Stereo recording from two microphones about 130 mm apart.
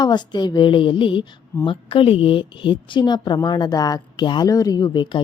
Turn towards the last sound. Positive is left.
turn(degrees=35)  # may be behind; listen again after turning